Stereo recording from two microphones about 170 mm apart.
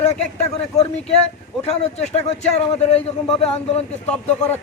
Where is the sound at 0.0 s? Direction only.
40° left (ahead or behind).